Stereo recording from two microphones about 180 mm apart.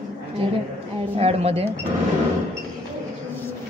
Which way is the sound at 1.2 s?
35° right (ahead or behind).